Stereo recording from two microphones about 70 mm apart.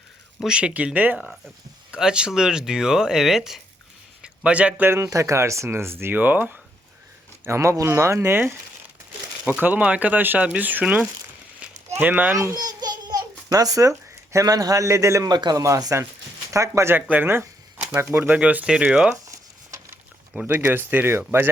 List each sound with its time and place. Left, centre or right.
0.3 s speech: centre
2.0 s speech: centre
4.2 s a sound: centre
4.8 s speech: right
5.0 s speech: right
7.4 s speech: right
11.6 s a sound: right
12.5 s babbling: right
14.3 s a man's voice: right
15.3 s speech: right
15.6 s a man's voice: right
16.9 s speech: right
18.3 s speech: right
20.5 s speech: right